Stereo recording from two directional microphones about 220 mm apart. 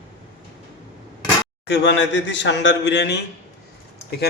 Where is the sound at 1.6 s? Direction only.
50° left (ahead or behind).